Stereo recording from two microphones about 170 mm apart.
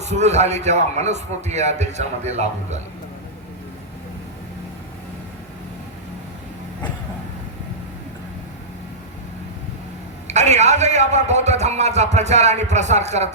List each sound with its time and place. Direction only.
0.0 s a man's voice: 40° right (ahead or behind)
10.2 s a man's voice: 40° right (ahead or behind)